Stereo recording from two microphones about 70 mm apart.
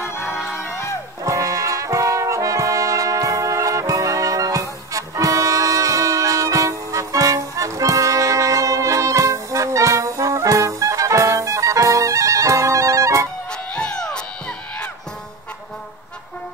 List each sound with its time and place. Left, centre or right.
0.0 s music: left
1.2 s brass instrument: right
13.5 s music: centre